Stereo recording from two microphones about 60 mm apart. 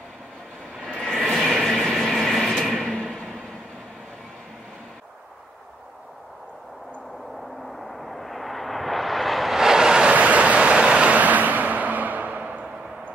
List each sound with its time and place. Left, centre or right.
0.8 s train: centre
7.7 s a sound: centre
10.1 s vehicle: right